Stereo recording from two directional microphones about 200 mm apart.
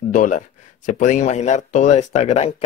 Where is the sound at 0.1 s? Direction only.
40° left (ahead or behind).